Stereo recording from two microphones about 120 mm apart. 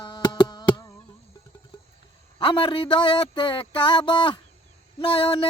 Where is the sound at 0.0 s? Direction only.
40° left (ahead or behind).